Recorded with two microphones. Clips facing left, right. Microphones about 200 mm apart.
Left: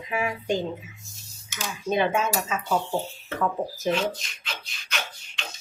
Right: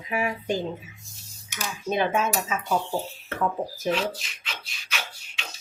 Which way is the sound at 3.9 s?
Centre (ahead or behind).